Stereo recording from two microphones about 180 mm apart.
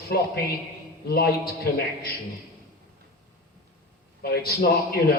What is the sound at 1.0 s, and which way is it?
Speech, 60° left (ahead or behind).